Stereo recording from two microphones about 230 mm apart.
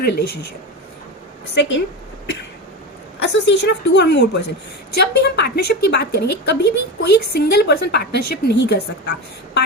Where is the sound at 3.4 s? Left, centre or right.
Left.